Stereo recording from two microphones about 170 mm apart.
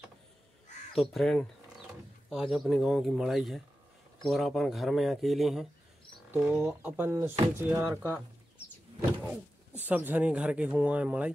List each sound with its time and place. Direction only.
0.9 s speech: centre (ahead or behind)
6.3 s speech: 15° right (ahead or behind)
9.8 s speech: 10° right (ahead or behind)